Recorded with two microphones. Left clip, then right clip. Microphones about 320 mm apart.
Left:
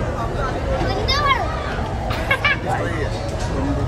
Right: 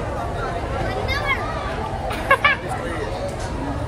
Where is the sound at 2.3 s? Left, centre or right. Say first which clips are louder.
Right 3 dB; centre.